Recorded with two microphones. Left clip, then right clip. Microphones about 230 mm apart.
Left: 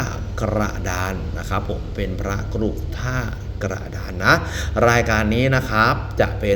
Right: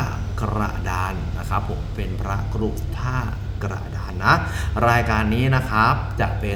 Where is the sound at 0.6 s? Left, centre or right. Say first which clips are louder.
Left 1 dB; centre.